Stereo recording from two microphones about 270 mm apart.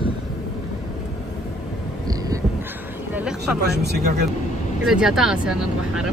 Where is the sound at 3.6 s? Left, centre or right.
Right.